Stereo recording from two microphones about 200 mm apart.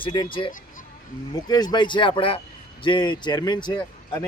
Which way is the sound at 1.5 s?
20° left (ahead or behind).